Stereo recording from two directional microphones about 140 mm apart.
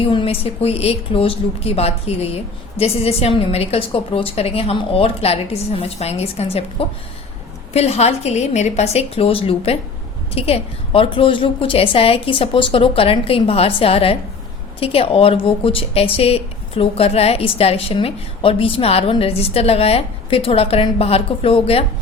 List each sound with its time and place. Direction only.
0.0 s a woman's voice: 40° left (ahead or behind)